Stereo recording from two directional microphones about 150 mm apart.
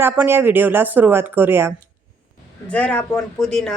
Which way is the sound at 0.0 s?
15° right (ahead or behind).